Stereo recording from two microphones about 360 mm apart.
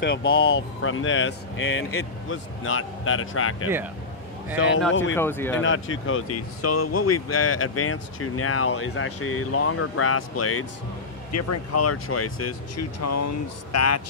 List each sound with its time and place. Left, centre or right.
0.0 s speech: left
5.1 s speech: centre
5.6 s speech: left